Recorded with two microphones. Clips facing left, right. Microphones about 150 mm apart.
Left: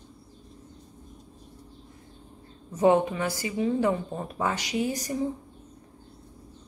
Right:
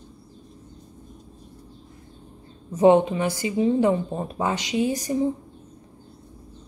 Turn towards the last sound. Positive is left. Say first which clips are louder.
# right 5 dB
turn(degrees=-20)  # may be behind; listen again after turning